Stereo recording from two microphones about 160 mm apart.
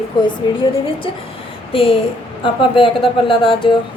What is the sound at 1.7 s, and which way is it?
A woman's voice, 35° left (ahead or behind).